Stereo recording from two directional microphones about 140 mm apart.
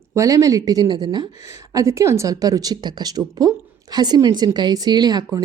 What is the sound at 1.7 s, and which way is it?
A woman's voice, 20° right (ahead or behind).